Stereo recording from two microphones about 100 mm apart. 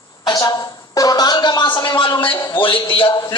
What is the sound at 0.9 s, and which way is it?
A man's voice, 40° left (ahead or behind).